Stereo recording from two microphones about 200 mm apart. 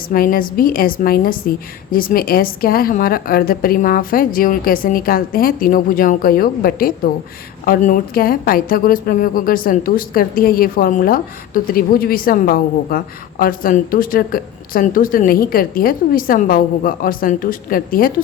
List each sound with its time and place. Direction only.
0.1 s a woman's voice: 45° left (ahead or behind)